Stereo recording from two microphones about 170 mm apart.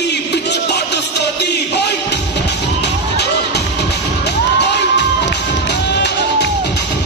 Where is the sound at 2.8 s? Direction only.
75° left (ahead or behind).